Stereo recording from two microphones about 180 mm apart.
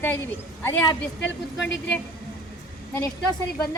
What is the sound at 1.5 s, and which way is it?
Speech, 80° left.